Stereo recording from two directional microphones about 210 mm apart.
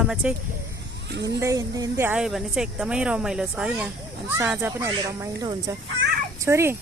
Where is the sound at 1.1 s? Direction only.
55° right (ahead or behind).